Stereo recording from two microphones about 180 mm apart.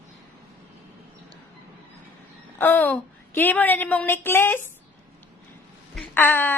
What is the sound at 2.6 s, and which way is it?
A woman's voice, 10° left (ahead or behind).